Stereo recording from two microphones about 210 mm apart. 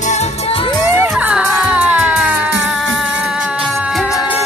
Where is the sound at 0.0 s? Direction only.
30° left (ahead or behind).